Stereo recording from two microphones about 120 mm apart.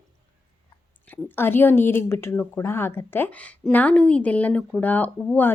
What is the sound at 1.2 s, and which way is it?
Speech, 20° left (ahead or behind).